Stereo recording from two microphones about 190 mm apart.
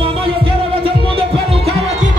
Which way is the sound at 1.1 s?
30° right (ahead or behind).